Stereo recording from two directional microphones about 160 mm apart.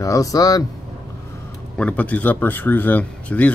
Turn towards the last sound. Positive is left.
turn(degrees=10)  # may be behind; listen again after turning